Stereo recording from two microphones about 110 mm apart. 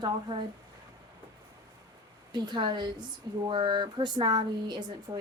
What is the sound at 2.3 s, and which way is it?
A woman's voice, 40° right (ahead or behind).